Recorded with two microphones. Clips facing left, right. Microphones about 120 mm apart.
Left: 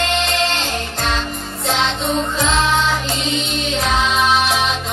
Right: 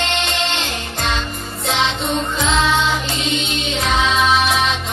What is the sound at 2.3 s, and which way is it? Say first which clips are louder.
Music: right 2 dB; centre (ahead or behind).